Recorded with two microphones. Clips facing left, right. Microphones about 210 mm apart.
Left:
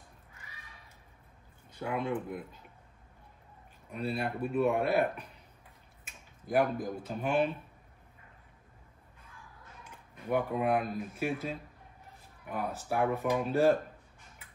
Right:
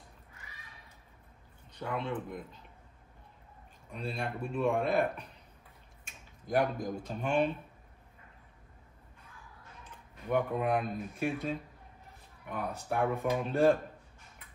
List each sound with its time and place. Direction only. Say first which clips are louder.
1.7 s speech: left 2 dB; 10° left (ahead or behind)
3.9 s speech: left 3 dB; 5° left (ahead or behind)
6.0 s speech: even; 5° left (ahead or behind)
9.8 s speech: left 1 dB; 5° left (ahead or behind)